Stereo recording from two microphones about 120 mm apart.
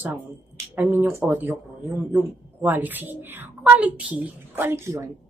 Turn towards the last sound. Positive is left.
turn(degrees=-25)  # may be behind; listen again after turning